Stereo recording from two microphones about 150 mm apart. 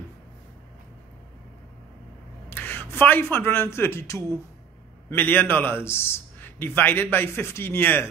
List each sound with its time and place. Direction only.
2.5 s a man's voice: 15° left (ahead or behind)